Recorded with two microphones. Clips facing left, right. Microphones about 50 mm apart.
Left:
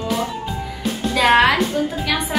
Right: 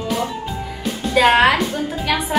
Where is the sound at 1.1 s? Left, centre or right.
Centre.